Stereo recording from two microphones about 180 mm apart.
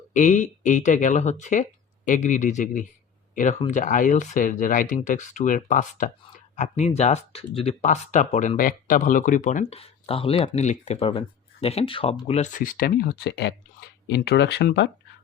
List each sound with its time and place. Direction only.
0.1 s speech: 45° left (ahead or behind)
12.5 s speech: 50° left (ahead or behind); by 14.8 s 70° left (ahead or behind)